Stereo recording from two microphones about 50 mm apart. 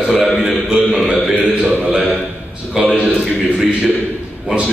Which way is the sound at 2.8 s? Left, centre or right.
Centre.